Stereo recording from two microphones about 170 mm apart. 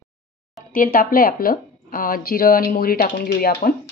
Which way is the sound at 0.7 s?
55° left (ahead or behind).